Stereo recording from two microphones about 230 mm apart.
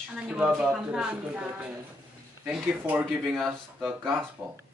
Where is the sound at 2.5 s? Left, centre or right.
Centre.